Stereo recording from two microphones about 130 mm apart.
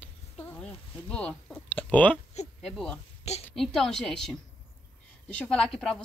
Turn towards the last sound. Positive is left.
turn(degrees=5)  # may be behind; listen again after turning